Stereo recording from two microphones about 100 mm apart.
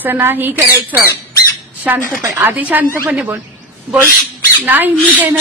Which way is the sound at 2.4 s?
15° right (ahead or behind).